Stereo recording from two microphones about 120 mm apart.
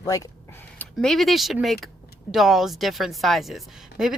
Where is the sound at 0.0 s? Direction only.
30° left (ahead or behind).